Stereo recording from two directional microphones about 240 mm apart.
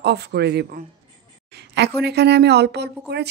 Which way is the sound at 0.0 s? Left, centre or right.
Right.